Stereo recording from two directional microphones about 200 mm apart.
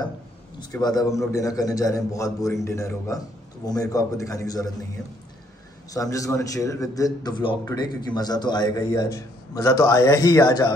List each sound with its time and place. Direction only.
0.6 s a man's voice: 20° left (ahead or behind)
5.9 s a man's voice: 15° left (ahead or behind)